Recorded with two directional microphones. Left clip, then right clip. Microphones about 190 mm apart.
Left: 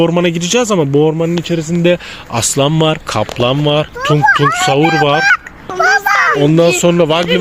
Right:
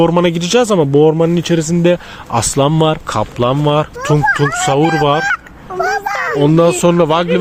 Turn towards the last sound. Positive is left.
turn(degrees=10)  # may be behind; listen again after turning